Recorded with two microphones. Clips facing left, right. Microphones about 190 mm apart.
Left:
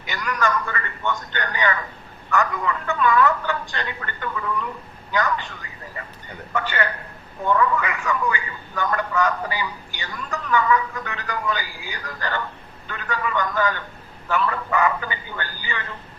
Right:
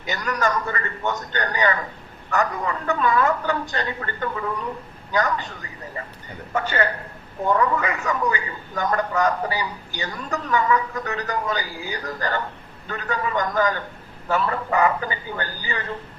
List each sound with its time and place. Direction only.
0.1 s speech: 35° right (ahead or behind)
6.5 s speech: 40° right (ahead or behind)